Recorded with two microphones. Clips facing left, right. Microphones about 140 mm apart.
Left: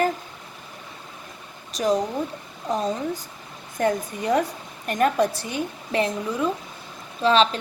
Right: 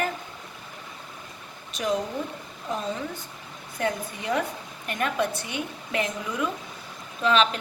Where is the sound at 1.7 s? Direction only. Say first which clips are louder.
Left 5 dB; 35° left (ahead or behind).